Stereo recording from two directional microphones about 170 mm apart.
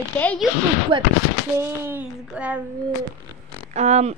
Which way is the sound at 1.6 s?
10° right (ahead or behind).